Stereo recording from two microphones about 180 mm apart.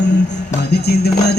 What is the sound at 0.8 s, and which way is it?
Music, 65° left (ahead or behind).